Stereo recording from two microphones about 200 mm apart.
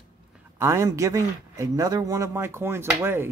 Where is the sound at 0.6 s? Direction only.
15° right (ahead or behind).